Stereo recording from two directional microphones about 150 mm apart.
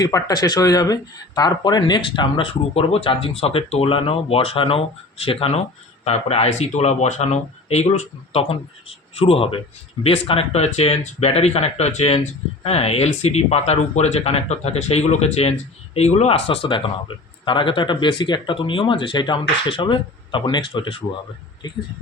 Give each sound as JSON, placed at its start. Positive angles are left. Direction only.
{"t": 0.0, "sound": "speech", "side_deg": 25}